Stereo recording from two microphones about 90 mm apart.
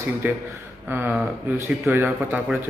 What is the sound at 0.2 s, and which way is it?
A man's voice, 20° right (ahead or behind).